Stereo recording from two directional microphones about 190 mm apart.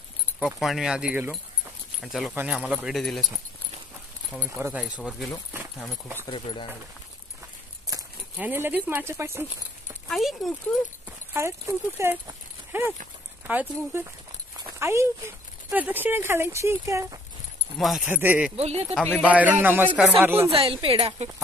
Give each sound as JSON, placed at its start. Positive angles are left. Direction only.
{"t": 0.4, "sound": "speech", "side_deg": 0}
{"t": 4.5, "sound": "speech", "side_deg": -10}
{"t": 6.1, "sound": "speech", "side_deg": 25}
{"t": 7.9, "sound": "speech", "side_deg": -10}
{"t": 10.0, "sound": "speech", "side_deg": 0}
{"t": 11.1, "sound": "speech", "side_deg": -15}
{"t": 14.6, "sound": "a sound", "side_deg": -15}
{"t": 15.7, "sound": "speech", "side_deg": -10}
{"t": 17.7, "sound": "speech", "side_deg": 0}
{"t": 18.6, "sound": "speech", "side_deg": -35}
{"t": 19.2, "sound": "speech", "side_deg": -10}
{"t": 20.5, "sound": "speech", "side_deg": -30}